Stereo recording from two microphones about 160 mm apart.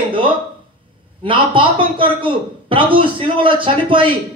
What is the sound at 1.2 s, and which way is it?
A man's voice, 30° right (ahead or behind).